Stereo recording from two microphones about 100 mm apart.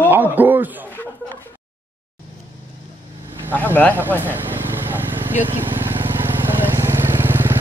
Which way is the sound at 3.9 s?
20° right (ahead or behind).